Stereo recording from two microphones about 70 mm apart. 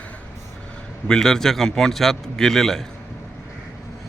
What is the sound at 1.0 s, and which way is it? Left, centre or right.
A man's voice, centre.